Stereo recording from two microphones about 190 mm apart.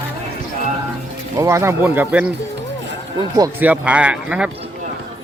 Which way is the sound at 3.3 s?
20° right (ahead or behind).